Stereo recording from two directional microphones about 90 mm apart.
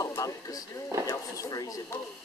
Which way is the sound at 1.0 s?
40° left (ahead or behind).